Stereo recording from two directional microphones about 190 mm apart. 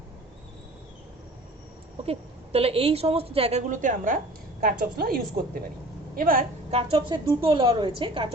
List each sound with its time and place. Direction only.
2.0 s a woman's voice: 30° right (ahead or behind)
3.7 s a woman's voice: 45° right (ahead or behind)
6.7 s a woman's voice: 30° right (ahead or behind)